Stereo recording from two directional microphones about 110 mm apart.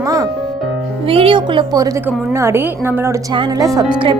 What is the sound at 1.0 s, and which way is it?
Speech, 55° right (ahead or behind).